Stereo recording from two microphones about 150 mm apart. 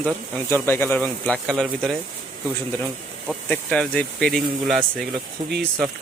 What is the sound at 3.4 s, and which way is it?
Speech, 5° left (ahead or behind).